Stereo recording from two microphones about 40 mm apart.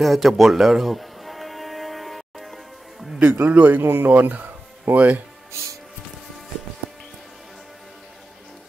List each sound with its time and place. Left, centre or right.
0.0 s music: centre
3.2 s speech: right
3.8 s speech: right
4.2 s speech: right